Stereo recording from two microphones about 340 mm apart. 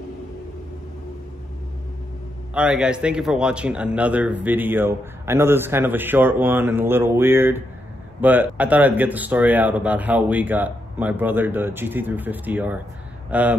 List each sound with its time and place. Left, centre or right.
2.5 s a man's voice: centre